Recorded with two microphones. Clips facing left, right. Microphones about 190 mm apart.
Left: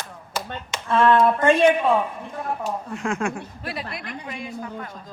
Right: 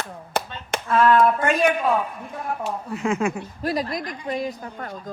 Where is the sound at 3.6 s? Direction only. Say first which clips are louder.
Right 9 dB; 40° right (ahead or behind).